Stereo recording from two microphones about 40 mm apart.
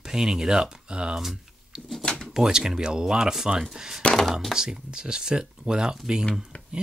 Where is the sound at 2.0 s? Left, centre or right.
Left.